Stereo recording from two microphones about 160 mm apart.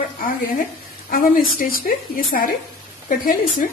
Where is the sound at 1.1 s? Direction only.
65° left (ahead or behind).